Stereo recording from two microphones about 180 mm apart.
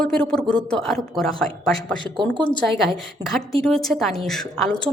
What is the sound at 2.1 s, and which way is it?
Speech, 25° right (ahead or behind).